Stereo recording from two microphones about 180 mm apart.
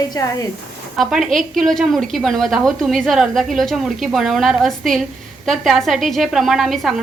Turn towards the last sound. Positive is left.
turn(degrees=0)  # may be behind; listen again after turning